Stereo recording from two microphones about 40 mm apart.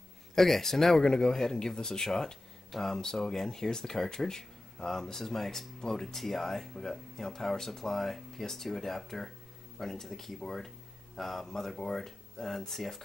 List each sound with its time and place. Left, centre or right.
0.3 s a man's voice: centre
1.4 s speech: centre